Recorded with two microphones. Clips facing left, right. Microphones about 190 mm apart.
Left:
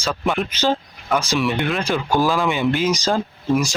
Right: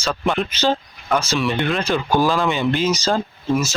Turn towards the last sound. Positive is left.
turn(degrees=15)  # may be behind; listen again after turning